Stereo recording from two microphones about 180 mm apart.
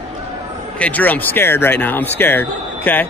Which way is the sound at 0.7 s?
10° left (ahead or behind).